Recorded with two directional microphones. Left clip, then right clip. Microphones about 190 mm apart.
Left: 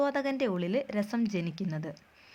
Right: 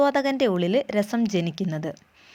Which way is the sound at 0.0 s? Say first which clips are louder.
Right 8 dB; 30° right (ahead or behind).